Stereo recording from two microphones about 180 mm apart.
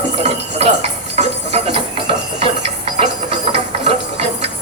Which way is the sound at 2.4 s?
30° right (ahead or behind).